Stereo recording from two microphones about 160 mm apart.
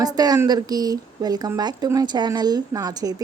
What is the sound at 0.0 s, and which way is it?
Speech, 25° right (ahead or behind).